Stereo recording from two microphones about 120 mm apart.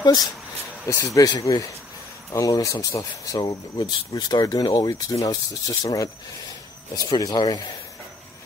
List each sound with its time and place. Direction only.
0.0 s speech: 35° left (ahead or behind)
7.1 s speech: 35° left (ahead or behind)